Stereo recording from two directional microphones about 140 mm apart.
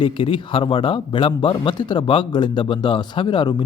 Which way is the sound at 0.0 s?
40° left (ahead or behind).